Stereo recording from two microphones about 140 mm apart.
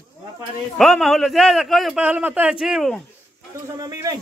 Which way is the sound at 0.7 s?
5° left (ahead or behind).